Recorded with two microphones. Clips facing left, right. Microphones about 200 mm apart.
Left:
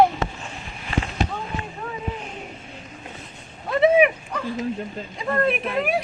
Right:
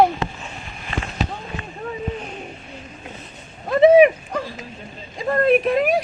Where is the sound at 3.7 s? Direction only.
35° right (ahead or behind).